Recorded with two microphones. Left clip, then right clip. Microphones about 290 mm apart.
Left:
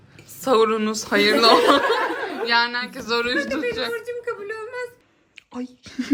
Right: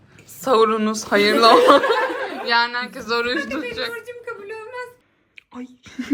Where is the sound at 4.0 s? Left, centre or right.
Left.